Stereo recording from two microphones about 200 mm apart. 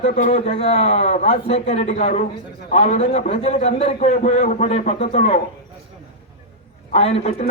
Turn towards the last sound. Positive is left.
turn(degrees=30)  # may be behind; listen again after turning